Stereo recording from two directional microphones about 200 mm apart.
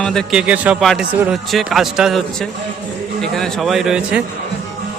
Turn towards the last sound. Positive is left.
turn(degrees=-5)  # may be behind; listen again after turning